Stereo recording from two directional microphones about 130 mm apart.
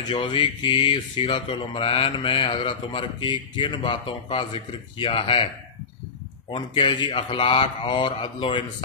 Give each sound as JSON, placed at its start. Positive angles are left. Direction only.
{"t": 0.1, "sound": "speech", "side_deg": 40}
{"t": 6.5, "sound": "speech", "side_deg": 40}